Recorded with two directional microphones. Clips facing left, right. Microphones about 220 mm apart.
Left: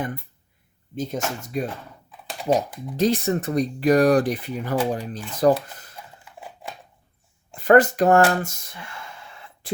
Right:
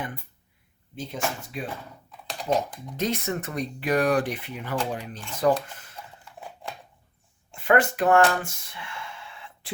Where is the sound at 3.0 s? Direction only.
35° left (ahead or behind).